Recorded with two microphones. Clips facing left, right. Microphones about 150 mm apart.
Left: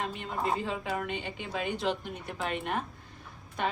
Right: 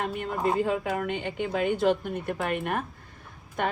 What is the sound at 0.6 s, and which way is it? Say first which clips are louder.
Speech: right 6 dB; 50° right (ahead or behind).